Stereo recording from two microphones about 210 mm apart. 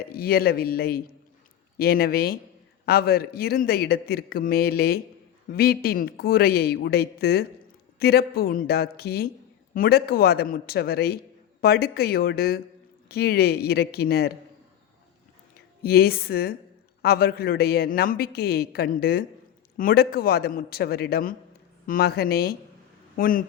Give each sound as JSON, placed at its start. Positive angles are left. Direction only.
{"t": 0.0, "sound": "a man's voice", "side_deg": 45}
{"t": 15.8, "sound": "a man's voice", "side_deg": 45}